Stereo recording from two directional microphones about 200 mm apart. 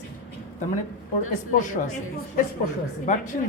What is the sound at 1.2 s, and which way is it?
Speech, 40° left (ahead or behind).